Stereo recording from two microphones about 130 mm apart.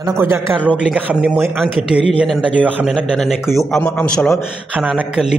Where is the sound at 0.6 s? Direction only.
10° left (ahead or behind).